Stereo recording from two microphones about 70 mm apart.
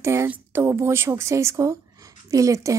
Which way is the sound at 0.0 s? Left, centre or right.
Right.